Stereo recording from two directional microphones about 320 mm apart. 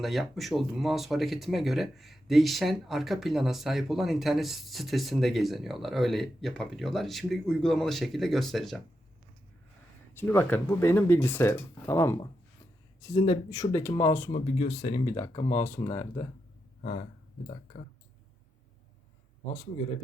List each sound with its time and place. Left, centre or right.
0.0 s speech: centre
10.2 s speech: centre
14.3 s speech: centre
16.8 s speech: left